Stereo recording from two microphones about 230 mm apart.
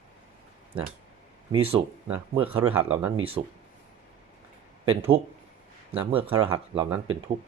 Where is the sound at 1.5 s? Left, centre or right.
Right.